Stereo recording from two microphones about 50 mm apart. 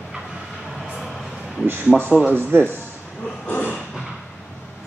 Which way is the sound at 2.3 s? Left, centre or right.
Right.